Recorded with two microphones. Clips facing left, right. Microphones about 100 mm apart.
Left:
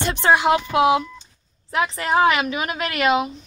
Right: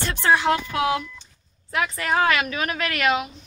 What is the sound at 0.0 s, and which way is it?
A woman's voice, 20° left (ahead or behind).